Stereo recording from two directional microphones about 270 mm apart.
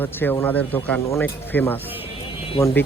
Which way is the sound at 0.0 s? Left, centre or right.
Centre.